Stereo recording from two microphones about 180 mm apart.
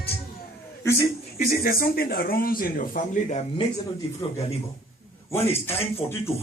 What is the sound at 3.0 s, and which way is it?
Speech, 50° left (ahead or behind).